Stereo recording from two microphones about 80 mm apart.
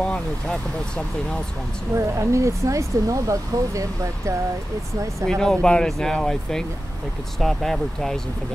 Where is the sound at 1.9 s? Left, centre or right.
Right.